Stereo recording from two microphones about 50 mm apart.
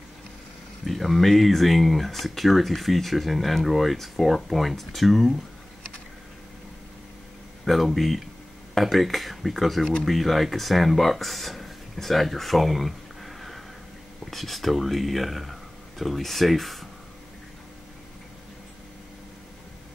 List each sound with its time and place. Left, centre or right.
0.8 s speech: centre
7.6 s speech: centre